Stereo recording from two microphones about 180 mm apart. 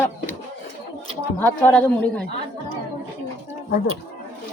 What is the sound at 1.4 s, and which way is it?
Speech, 10° left (ahead or behind).